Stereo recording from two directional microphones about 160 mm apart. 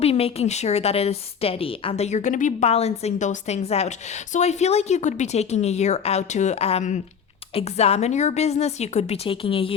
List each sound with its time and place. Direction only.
0.0 s a woman's voice: 40° left (ahead or behind)